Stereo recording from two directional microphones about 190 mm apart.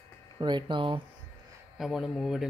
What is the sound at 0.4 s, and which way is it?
Speech, 25° right (ahead or behind).